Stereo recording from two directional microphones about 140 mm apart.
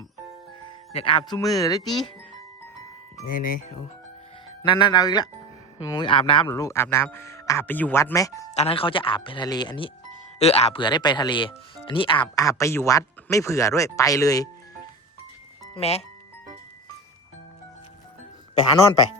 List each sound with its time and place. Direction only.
0.9 s speech: 35° left (ahead or behind)
1.3 s speech: 25° left (ahead or behind)
3.2 s speech: 80° left
4.6 s speech: 35° left (ahead or behind)
6.1 s speech: 35° left (ahead or behind)
6.5 s speech: 20° left (ahead or behind)
8.1 s speech: 25° left (ahead or behind)
8.5 s speech: 45° left (ahead or behind)
10.4 s speech: 45° left (ahead or behind)
10.8 s speech: 30° left (ahead or behind)
15.7 s speech: 50° left (ahead or behind)